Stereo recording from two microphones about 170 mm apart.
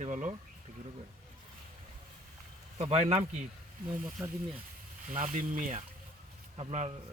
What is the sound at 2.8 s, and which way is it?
Speech, 40° right (ahead or behind).